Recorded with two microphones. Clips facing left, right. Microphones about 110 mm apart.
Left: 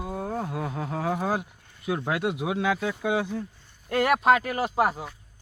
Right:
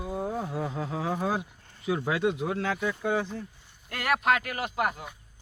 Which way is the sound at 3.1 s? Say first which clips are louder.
Left 3 dB; 10° left (ahead or behind).